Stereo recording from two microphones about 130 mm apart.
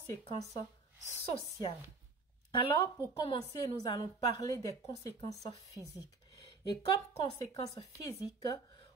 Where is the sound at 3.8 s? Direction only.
30° left (ahead or behind).